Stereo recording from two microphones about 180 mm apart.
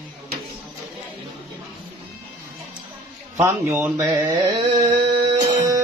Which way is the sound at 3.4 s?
10° right (ahead or behind).